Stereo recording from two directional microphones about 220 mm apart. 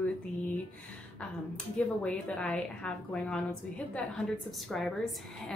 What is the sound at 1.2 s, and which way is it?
A woman's voice, 5° left (ahead or behind).